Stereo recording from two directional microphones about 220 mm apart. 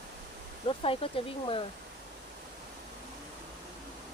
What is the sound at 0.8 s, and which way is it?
Speech, 25° left (ahead or behind).